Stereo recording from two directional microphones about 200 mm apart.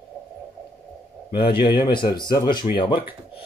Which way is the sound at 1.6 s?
25° left (ahead or behind).